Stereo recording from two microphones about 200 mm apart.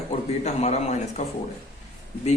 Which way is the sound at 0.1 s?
35° left (ahead or behind).